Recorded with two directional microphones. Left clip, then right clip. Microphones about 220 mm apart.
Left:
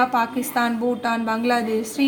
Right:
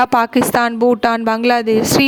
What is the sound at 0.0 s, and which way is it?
A woman's voice, 50° right (ahead or behind).